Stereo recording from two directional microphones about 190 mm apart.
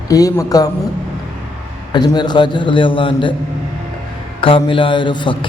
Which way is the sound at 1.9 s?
25° left (ahead or behind).